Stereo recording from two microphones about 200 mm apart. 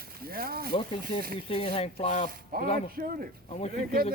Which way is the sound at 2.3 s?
45° right (ahead or behind).